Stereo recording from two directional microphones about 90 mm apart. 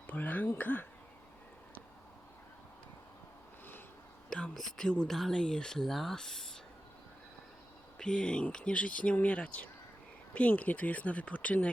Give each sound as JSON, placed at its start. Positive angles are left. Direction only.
{"t": 0.1, "sound": "speech", "side_deg": 20}
{"t": 4.3, "sound": "speech", "side_deg": 10}
{"t": 7.9, "sound": "speech", "side_deg": 10}